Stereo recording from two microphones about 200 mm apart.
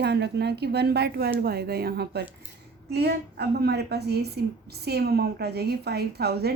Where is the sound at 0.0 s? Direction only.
55° right (ahead or behind).